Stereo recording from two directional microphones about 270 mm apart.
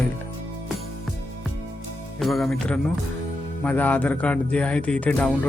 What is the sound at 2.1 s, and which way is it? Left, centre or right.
A man's voice, centre.